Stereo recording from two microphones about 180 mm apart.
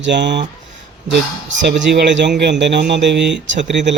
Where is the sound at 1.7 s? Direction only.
70° right (ahead or behind).